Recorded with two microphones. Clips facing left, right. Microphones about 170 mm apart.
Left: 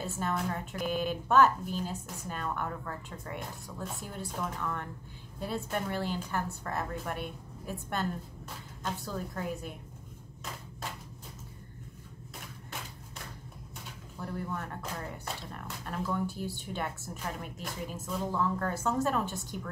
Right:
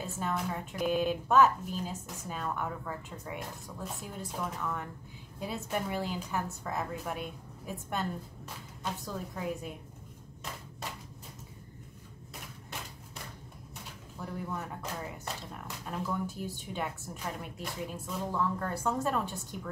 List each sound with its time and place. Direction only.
0.2 s a woman's voice: centre (ahead or behind)
9.0 s a woman's voice: 5° right (ahead or behind)
14.2 s a woman's voice: 5° right (ahead or behind)